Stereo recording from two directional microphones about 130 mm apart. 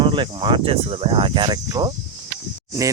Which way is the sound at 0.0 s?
40° right (ahead or behind).